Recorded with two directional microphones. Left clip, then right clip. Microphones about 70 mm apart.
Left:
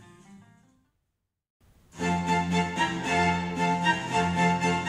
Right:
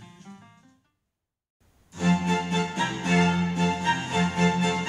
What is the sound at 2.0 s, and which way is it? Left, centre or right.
Music, centre.